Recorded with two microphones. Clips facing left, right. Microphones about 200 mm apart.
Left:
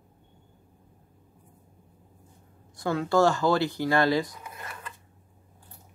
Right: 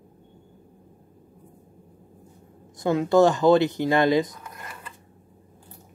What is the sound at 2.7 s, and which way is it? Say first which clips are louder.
Speech: right 5 dB; 20° right (ahead or behind).